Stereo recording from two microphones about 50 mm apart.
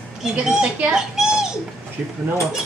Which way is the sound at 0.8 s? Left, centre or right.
Centre.